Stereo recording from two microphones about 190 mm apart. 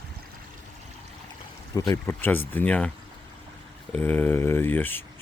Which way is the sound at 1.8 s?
15° left (ahead or behind).